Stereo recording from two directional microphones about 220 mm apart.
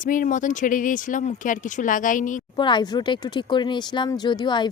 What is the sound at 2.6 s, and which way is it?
Speech, 20° left (ahead or behind).